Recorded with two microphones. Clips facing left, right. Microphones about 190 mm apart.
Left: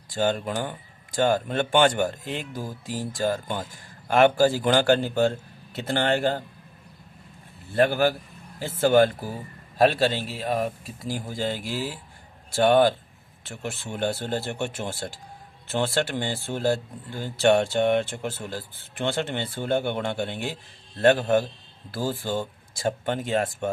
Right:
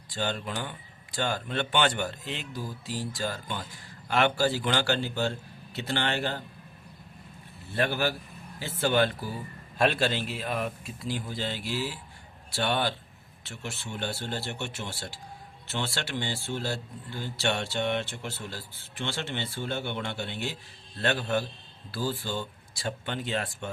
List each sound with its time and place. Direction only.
0.1 s speech: 45° left (ahead or behind)
7.7 s speech: 50° left (ahead or behind)